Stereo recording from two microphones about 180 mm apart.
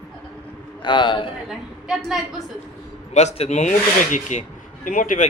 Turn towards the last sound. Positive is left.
turn(degrees=50)  # may be behind; listen again after turning